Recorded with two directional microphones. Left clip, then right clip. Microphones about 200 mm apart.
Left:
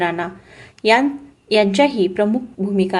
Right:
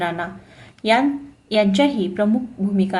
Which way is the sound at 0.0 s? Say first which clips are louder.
Left 3 dB; 30° left (ahead or behind).